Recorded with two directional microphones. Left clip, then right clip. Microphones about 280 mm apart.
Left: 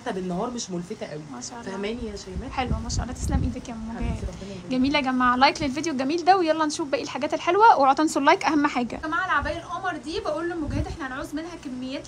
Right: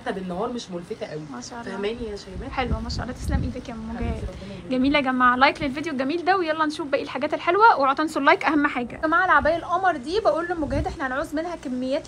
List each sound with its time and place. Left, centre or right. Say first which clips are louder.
4.6 s a woman's voice: right 2 dB; centre